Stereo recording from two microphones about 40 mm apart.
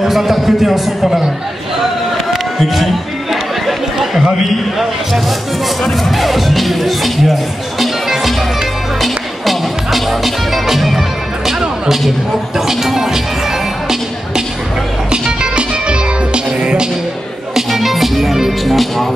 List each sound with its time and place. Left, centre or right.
0.0 s a man's voice: centre
2.3 s a sound: centre
3.6 s speech: centre
5.9 s music: centre
12.5 s speech: centre
15.0 s music: right
17.6 s music: centre